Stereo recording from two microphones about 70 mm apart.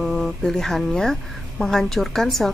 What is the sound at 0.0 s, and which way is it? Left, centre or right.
A woman's voice, centre.